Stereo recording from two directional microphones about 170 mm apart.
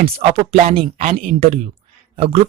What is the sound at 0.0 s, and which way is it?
Speech, 35° right (ahead or behind).